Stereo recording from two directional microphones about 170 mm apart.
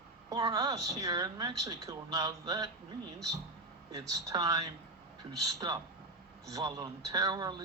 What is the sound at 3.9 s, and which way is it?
Speech, 20° right (ahead or behind).